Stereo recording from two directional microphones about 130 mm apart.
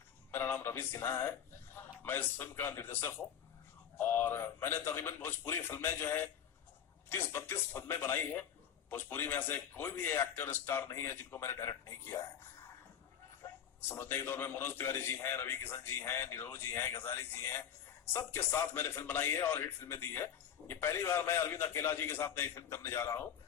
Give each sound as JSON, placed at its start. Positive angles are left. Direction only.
{"t": 0.3, "sound": "a man's voice", "side_deg": 15}
{"t": 13.4, "sound": "a man's voice", "side_deg": 20}